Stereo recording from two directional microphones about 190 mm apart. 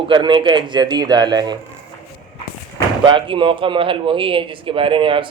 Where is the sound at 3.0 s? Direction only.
25° right (ahead or behind).